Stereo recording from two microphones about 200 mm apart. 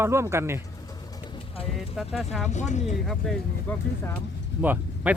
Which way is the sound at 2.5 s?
35° left (ahead or behind).